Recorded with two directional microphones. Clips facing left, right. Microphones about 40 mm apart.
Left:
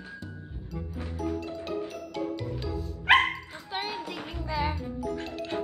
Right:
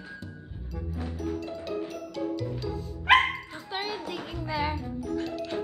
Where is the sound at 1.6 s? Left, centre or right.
Left.